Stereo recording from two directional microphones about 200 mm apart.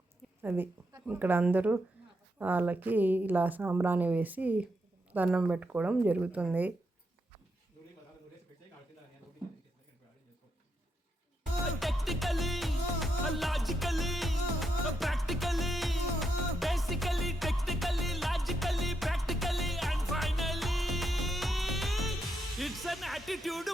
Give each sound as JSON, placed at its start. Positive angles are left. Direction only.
{"t": 0.4, "sound": "speech", "side_deg": -10}
{"t": 11.6, "sound": "music", "side_deg": 0}